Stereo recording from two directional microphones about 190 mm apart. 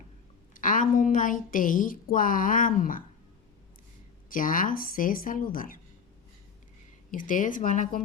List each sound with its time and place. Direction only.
0.5 s a woman's voice: 45° left (ahead or behind)
4.3 s speech: 45° left (ahead or behind)
7.1 s speech: 45° left (ahead or behind)